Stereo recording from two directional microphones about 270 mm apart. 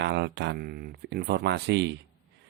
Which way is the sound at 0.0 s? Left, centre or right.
Right.